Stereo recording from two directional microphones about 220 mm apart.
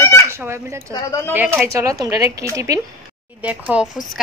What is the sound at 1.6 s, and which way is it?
A woman's voice, 15° right (ahead or behind).